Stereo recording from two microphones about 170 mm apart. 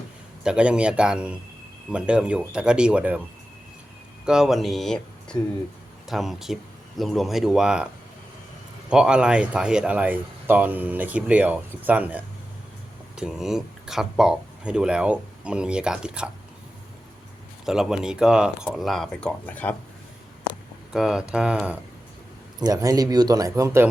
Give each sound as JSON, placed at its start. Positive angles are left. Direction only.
{"t": 0.4, "sound": "speech", "side_deg": -5}
{"t": 4.3, "sound": "speech", "side_deg": 0}
{"t": 8.9, "sound": "speech", "side_deg": -5}
{"t": 17.7, "sound": "speech", "side_deg": -5}
{"t": 20.9, "sound": "speech", "side_deg": -5}
{"t": 22.6, "sound": "speech", "side_deg": -20}